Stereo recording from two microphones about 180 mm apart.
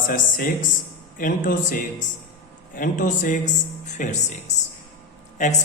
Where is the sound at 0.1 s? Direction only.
50° left (ahead or behind).